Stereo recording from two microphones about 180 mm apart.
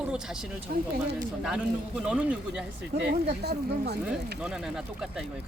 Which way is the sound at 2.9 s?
40° right (ahead or behind).